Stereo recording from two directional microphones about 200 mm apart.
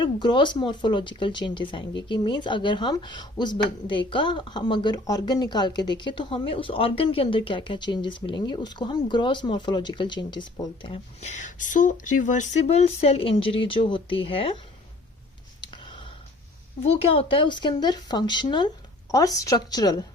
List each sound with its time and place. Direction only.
0.0 s speech: 25° left (ahead or behind)
15.6 s a sound: 25° left (ahead or behind)
16.8 s speech: 30° left (ahead or behind)